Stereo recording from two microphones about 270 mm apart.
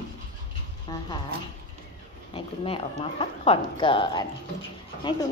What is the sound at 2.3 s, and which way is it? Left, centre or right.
Speech, left.